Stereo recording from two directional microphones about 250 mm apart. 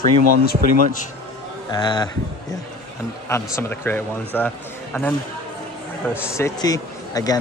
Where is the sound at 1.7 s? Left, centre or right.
Centre.